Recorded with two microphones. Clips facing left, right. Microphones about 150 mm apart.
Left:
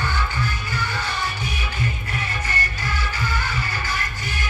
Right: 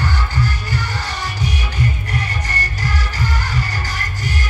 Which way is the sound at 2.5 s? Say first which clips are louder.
Right 3 dB; 40° right (ahead or behind).